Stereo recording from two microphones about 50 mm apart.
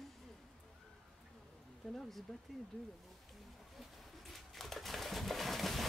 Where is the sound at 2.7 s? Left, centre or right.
Left.